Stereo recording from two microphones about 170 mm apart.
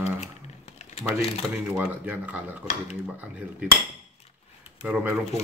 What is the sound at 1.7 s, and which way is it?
Cutlery, 10° right (ahead or behind).